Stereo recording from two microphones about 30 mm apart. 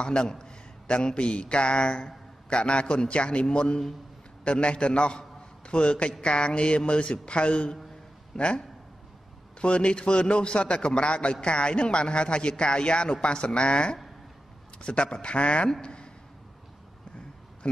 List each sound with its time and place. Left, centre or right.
0.0 s a sound: left
0.9 s speech: left
3.4 s a man's voice: left
8.3 s speech: centre
9.6 s a man's voice: left
15.8 s a sound: left